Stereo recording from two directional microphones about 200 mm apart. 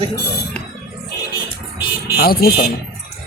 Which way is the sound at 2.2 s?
50° left (ahead or behind).